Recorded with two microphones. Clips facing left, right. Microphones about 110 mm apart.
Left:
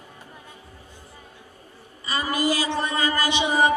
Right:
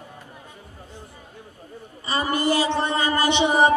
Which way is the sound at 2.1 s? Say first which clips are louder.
Right 2 dB; 25° right (ahead or behind).